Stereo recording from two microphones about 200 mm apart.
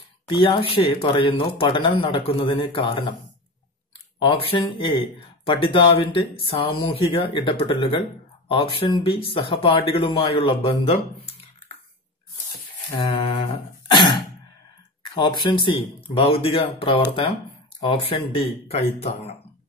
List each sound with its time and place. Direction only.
0.3 s speech: 25° left (ahead or behind)
4.2 s speech: 25° left (ahead or behind)
12.9 s throat clearing: 25° left (ahead or behind)
15.1 s speech: 25° left (ahead or behind)